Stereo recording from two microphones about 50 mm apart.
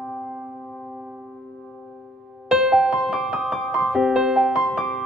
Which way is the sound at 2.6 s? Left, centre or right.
Centre.